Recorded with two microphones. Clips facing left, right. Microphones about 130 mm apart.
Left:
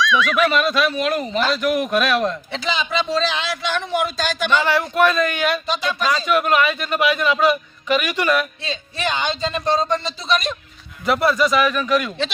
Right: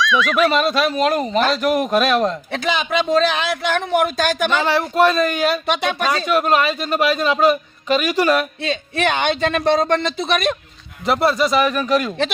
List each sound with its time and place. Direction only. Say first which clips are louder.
0.0 s a sound: right 1 dB; centre (ahead or behind)
0.5 s a man's voice: right 1 dB; 35° right (ahead or behind)
2.5 s a man's voice: right 3 dB; 55° right (ahead or behind)
4.6 s a man's voice: right 3 dB; 30° right (ahead or behind)
5.6 s speech: right 2 dB; 65° right (ahead or behind)
6.2 s a man's voice: right 1 dB; 35° right (ahead or behind)
8.6 s speech: right 5 dB; 60° right (ahead or behind)
11.0 s a man's voice: right 1 dB; 30° right (ahead or behind)